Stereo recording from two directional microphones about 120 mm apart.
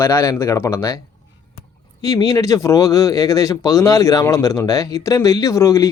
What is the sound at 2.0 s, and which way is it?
Speech, 30° left (ahead or behind).